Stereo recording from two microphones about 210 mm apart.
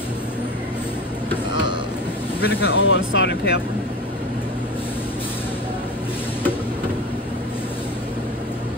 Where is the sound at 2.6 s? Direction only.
65° left (ahead or behind).